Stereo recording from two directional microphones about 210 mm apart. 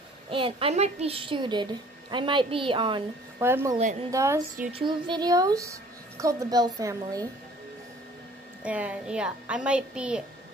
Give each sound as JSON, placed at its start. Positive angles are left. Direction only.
{"t": 0.3, "sound": "a woman's voice", "side_deg": -25}
{"t": 3.3, "sound": "a woman's voice", "side_deg": -10}
{"t": 8.6, "sound": "a woman's voice", "side_deg": -5}